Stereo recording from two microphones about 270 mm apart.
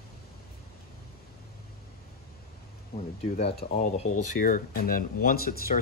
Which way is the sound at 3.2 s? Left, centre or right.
Left.